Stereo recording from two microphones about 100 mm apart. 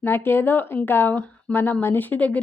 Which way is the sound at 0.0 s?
20° left (ahead or behind).